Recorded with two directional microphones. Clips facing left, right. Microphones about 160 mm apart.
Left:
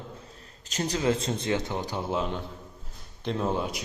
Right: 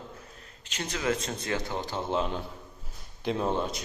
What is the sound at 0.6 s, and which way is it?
A man's voice, 40° left (ahead or behind).